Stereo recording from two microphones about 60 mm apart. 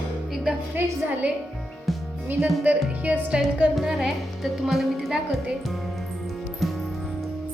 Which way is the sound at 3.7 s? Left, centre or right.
Centre.